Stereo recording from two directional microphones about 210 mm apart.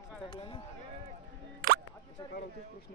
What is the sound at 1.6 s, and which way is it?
Music, 45° right (ahead or behind).